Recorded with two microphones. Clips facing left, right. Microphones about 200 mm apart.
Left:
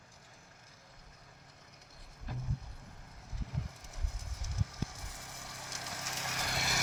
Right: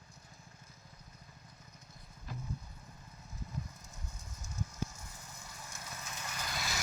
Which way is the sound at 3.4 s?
85° left.